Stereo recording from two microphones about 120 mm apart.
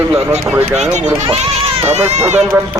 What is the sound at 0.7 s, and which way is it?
Speech, 70° right (ahead or behind).